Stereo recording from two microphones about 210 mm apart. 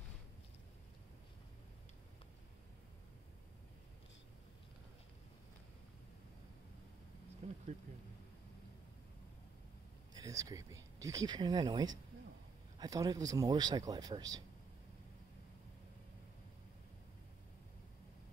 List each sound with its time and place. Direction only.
7.4 s bee: 35° right (ahead or behind)
10.1 s speech: 15° right (ahead or behind)